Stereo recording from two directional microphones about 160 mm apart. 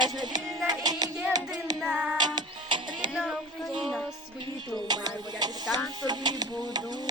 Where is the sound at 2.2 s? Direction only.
25° right (ahead or behind).